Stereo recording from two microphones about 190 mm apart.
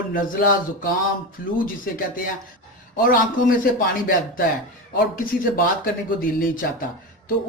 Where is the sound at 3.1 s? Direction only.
50° left (ahead or behind).